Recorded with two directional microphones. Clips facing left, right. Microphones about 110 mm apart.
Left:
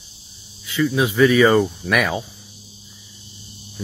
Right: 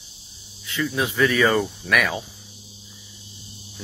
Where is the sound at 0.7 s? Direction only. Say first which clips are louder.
Left 5 dB; 5° left (ahead or behind).